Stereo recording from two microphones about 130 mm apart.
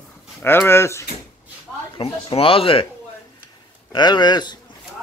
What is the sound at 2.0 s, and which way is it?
Speech, 45° left (ahead or behind).